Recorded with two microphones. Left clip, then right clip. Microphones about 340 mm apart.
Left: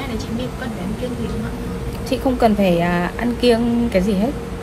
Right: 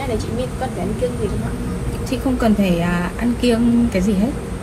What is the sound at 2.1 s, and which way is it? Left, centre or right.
A woman's voice, left.